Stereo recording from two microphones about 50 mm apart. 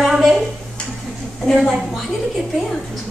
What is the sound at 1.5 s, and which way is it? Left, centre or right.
Speech, centre.